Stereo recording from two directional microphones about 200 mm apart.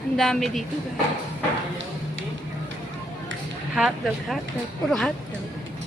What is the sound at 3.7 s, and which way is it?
Speech, 5° right (ahead or behind).